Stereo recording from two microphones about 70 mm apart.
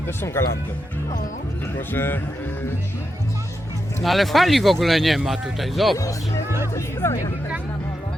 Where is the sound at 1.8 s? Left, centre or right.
Left.